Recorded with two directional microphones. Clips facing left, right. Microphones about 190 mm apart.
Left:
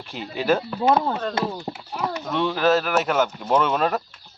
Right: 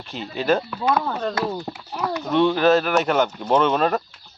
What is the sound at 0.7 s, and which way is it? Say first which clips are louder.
Speech: left 2 dB; 30° left (ahead or behind).